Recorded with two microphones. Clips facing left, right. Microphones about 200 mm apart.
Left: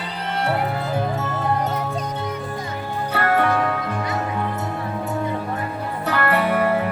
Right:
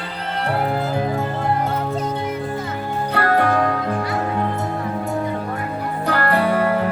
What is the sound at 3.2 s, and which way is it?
Music, 35° right (ahead or behind).